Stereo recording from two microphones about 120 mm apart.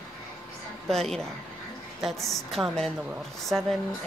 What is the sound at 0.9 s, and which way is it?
Speech, 5° left (ahead or behind).